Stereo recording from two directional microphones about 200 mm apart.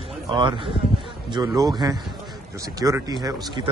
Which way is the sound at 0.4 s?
25° right (ahead or behind).